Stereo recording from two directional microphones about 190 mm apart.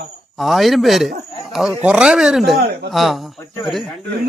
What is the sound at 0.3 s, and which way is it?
Speech, centre (ahead or behind).